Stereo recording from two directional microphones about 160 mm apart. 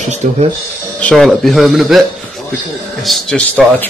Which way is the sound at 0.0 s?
45° right (ahead or behind).